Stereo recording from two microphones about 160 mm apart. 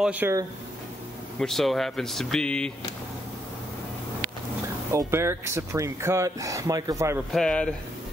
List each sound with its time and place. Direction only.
0.0 s speech: 10° right (ahead or behind)
1.4 s speech: centre (ahead or behind)
4.9 s speech: 15° right (ahead or behind)
7.3 s speech: 5° left (ahead or behind)